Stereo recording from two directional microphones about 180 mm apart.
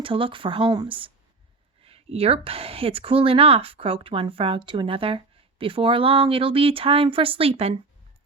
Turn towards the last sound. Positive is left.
turn(degrees=-30)  # may be behind; listen again after turning